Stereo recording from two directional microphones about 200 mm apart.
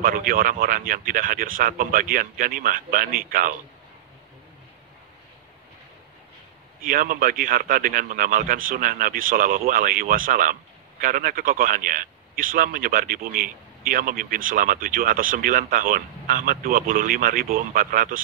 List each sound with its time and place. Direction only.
0.0 s a man's voice: 45° right (ahead or behind)
6.8 s a man's voice: 45° right (ahead or behind)